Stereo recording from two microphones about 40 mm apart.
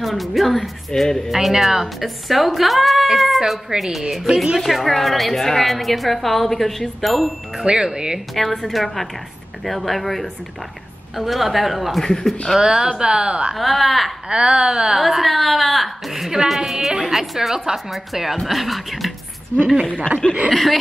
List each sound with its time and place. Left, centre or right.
0.0 s a woman's voice: centre
1.0 s speech: centre
1.3 s a woman's voice: centre
7.5 s a woman's voice: centre
8.4 s a woman's voice: centre
12.0 s speech: centre
12.5 s a woman's voice: centre
13.6 s a woman's voice: centre
14.3 s a woman's voice: right
15.0 s a woman's voice: centre
20.2 s a woman's voice: left